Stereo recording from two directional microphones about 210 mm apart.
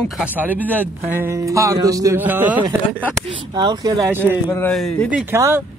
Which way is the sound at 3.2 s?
25° right (ahead or behind).